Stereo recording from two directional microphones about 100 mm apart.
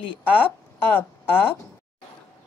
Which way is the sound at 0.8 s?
20° left (ahead or behind).